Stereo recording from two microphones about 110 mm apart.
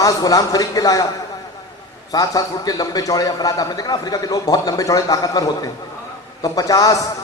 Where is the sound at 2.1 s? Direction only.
35° left (ahead or behind).